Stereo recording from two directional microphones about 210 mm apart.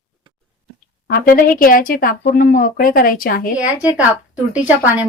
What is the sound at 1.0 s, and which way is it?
Speech, 45° left (ahead or behind).